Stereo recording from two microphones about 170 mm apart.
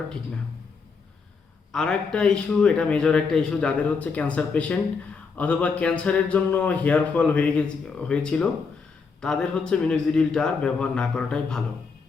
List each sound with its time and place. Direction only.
1.7 s a man's voice: 5° left (ahead or behind)